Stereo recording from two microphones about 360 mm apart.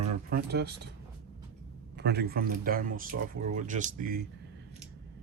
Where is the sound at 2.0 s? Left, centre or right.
Right.